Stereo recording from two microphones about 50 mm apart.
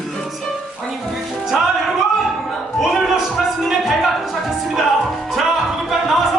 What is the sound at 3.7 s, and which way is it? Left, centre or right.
Speech, centre.